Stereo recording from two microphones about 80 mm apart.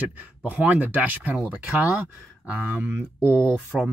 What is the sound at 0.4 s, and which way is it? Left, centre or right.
Speech, centre.